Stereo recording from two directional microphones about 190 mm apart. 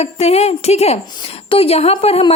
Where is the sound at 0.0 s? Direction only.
35° left (ahead or behind).